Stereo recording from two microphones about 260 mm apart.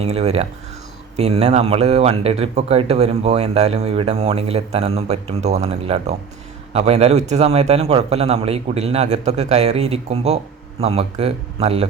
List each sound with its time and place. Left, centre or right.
0.0 s a man's voice: right